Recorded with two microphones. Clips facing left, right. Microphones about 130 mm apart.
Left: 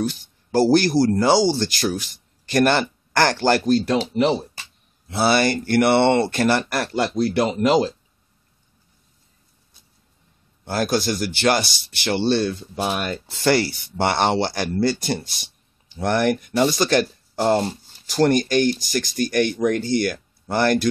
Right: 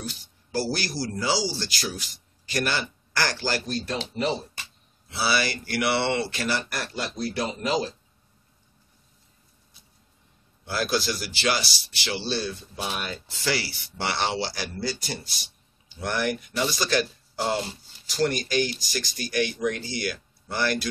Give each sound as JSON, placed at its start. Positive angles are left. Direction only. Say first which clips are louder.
{"t": 0.1, "sound": "speech", "louder": "left 9 dB", "side_deg": 50}
{"t": 5.0, "sound": "speech", "louder": "left 8 dB", "side_deg": 50}
{"t": 10.6, "sound": "speech", "louder": "left 5 dB", "side_deg": 45}